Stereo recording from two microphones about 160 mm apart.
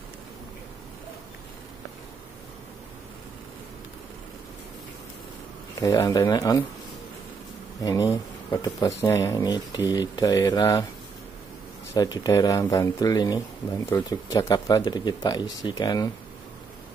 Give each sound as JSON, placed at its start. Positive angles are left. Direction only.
{"t": 5.8, "sound": "speech", "side_deg": 20}
{"t": 7.8, "sound": "speech", "side_deg": 20}
{"t": 11.9, "sound": "speech", "side_deg": 25}